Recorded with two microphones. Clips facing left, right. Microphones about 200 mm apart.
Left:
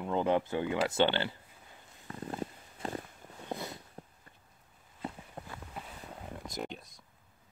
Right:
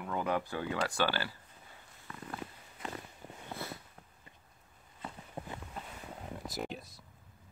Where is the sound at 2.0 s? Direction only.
35° left (ahead or behind).